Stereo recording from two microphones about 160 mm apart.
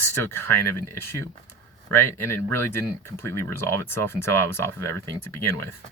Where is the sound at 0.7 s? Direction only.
15° left (ahead or behind).